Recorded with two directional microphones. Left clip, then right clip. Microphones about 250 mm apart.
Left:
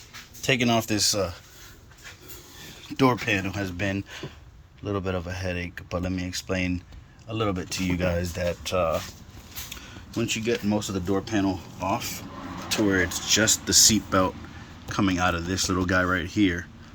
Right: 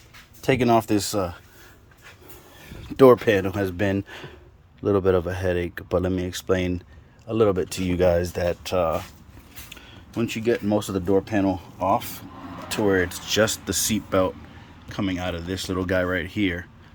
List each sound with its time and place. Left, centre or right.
0.4 s speech: centre
3.0 s speech: right
10.2 s speech: right